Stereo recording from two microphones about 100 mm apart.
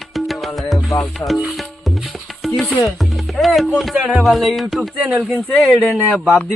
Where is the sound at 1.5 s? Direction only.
Centre (ahead or behind).